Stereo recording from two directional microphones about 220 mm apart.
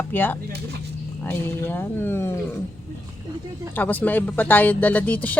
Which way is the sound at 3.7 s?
10° left (ahead or behind).